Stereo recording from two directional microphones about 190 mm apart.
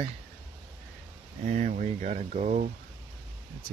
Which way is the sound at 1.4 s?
40° right (ahead or behind).